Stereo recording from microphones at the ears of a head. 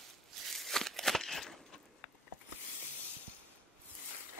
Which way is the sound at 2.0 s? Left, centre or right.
Left.